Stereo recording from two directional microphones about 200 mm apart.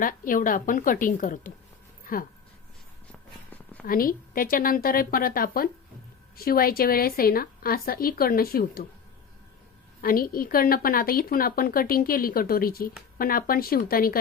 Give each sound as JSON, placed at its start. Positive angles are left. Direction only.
{"t": 0.0, "sound": "a woman's voice", "side_deg": 45}
{"t": 3.1, "sound": "a sound", "side_deg": 10}
{"t": 3.8, "sound": "a woman's voice", "side_deg": 45}
{"t": 10.0, "sound": "a woman's voice", "side_deg": 45}